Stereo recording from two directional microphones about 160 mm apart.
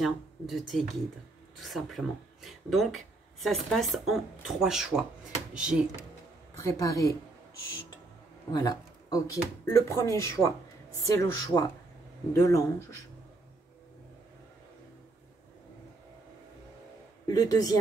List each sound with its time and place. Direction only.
0.0 s speech: centre (ahead or behind)
6.6 s speech: 20° left (ahead or behind)
8.5 s speech: 25° left (ahead or behind)
17.3 s speech: 25° left (ahead or behind)